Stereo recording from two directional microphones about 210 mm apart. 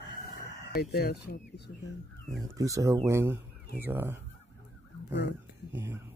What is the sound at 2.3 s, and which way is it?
Speech, 15° right (ahead or behind).